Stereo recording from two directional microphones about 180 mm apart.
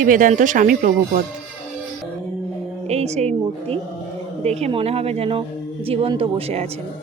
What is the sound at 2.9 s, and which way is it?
Speech, 35° right (ahead or behind).